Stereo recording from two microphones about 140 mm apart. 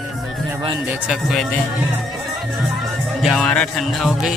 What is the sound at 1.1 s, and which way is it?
Music, centre (ahead or behind).